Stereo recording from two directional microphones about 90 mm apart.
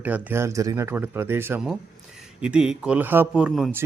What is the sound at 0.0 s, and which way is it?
Speech, 20° right (ahead or behind).